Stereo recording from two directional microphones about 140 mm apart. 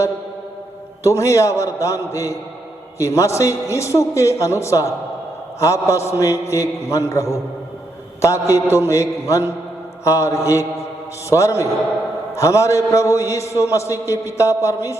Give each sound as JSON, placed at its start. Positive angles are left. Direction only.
{"t": 1.0, "sound": "a man's voice", "side_deg": 20}